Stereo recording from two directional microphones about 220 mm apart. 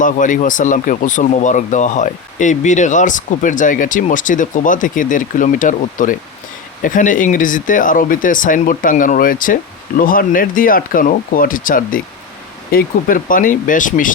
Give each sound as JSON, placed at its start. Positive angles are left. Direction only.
{"t": 0.0, "sound": "speech", "side_deg": 35}